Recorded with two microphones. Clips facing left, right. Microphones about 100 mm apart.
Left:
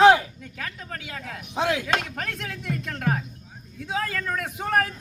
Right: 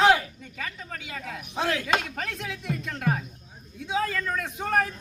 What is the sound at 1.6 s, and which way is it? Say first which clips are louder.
Speech: left 3 dB; 15° left (ahead or behind).